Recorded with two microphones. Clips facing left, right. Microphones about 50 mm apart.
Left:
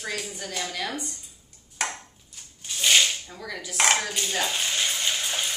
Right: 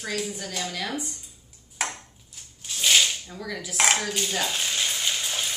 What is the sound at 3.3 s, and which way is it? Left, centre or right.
Dishes, centre.